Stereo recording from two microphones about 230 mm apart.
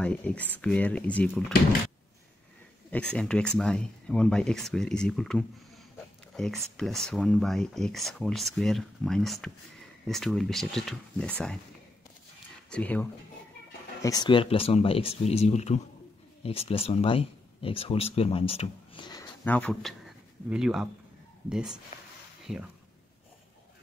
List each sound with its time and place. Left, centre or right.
0.0 s speech: centre
2.9 s speech: centre
12.6 s speech: centre
14.0 s speech: centre
19.4 s speech: centre